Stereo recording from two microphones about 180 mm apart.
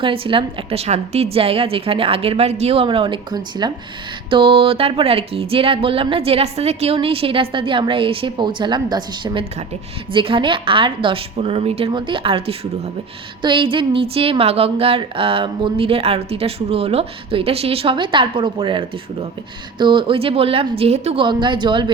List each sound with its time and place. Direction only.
0.0 s a woman's voice: 30° right (ahead or behind)